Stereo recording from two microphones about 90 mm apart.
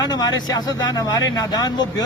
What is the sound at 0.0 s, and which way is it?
Speech, 50° left (ahead or behind).